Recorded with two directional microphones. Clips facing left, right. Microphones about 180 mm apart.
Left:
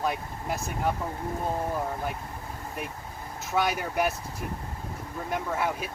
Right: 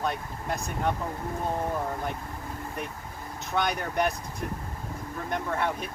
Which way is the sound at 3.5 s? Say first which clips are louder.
Left 1 dB; 5° left (ahead or behind).